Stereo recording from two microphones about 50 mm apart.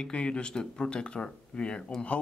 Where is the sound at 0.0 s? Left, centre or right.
Centre.